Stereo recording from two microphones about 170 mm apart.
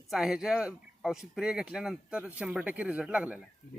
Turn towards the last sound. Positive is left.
turn(degrees=-5)  # may be behind; listen again after turning